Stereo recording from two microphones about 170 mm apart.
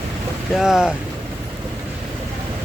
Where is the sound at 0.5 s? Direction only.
5° right (ahead or behind).